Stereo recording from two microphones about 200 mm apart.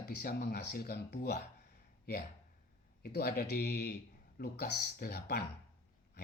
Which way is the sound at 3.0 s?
50° left (ahead or behind).